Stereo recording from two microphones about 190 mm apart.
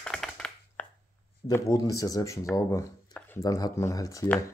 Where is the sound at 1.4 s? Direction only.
15° left (ahead or behind).